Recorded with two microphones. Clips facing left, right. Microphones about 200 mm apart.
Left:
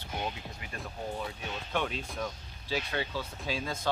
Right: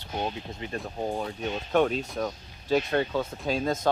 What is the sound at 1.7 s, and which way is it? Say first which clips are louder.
Speech: right 10 dB; 45° right (ahead or behind).